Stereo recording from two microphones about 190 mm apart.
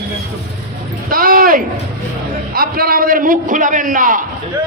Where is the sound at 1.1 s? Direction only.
50° right (ahead or behind).